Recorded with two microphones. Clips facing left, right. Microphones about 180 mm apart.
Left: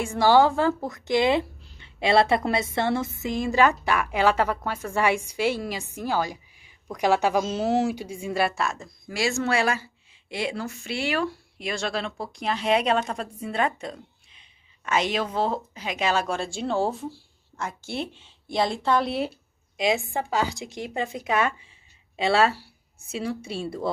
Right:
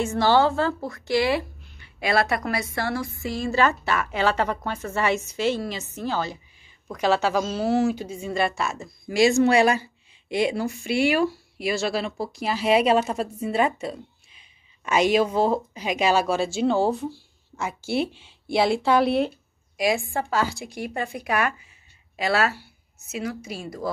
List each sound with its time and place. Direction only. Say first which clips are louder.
0.0 s a woman's voice: left 1 dB; 10° left (ahead or behind)
9.1 s a woman's voice: right 7 dB; 20° right (ahead or behind); by 19.3 s centre (ahead or behind)
19.8 s a woman's voice: right 1 dB; 20° left (ahead or behind)